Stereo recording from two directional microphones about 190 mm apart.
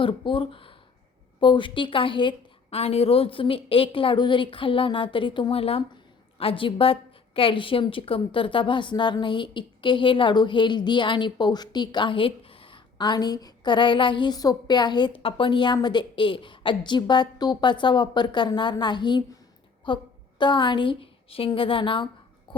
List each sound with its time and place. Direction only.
0.0 s a woman's voice: 25° left (ahead or behind)